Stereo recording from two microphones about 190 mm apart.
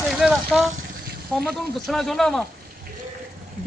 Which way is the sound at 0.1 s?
Centre (ahead or behind).